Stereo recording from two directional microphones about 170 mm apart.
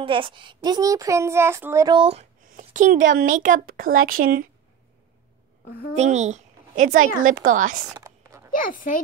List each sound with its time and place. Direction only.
0.0 s a child's voice: 30° right (ahead or behind)
2.0 s speech: 35° right (ahead or behind)
2.5 s speech: 50° right (ahead or behind)
5.7 s a child's voice: 65° left (ahead or behind)
5.9 s a child's voice: 45° right (ahead or behind)
7.9 s a sound: 15° right (ahead or behind)
8.5 s speech: 55° left (ahead or behind)